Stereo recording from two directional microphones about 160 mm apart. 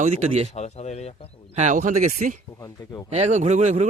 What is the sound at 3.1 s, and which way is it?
Speech, 45° right (ahead or behind).